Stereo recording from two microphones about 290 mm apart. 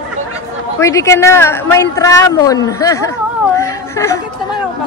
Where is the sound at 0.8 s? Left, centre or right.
Centre.